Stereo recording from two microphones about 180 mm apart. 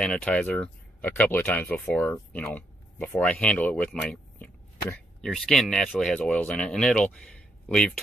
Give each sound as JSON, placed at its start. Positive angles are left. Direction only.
{"t": 0.0, "sound": "speech", "side_deg": 5}